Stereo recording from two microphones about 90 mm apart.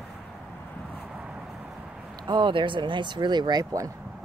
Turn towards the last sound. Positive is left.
turn(degrees=-55)  # may be behind; listen again after turning